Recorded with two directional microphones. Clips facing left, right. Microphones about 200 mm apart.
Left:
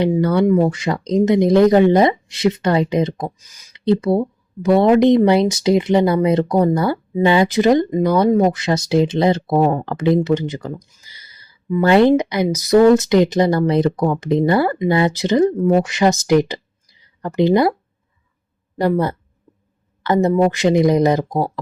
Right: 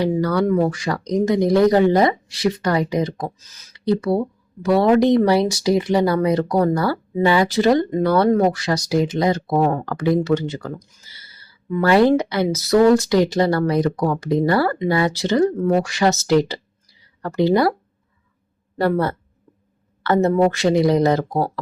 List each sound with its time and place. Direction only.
0.0 s speech: 25° left (ahead or behind)
3.7 s speech: 25° left (ahead or behind)
18.8 s speech: 15° left (ahead or behind)
20.2 s speech: 15° left (ahead or behind)